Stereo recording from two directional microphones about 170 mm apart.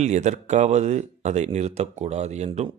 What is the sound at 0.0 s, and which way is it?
Speech, 45° right (ahead or behind).